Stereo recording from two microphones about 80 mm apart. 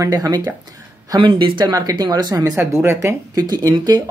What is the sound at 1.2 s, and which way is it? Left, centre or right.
Speech, right.